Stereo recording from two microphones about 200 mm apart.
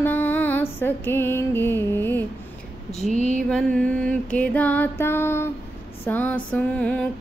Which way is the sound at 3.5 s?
5° left (ahead or behind).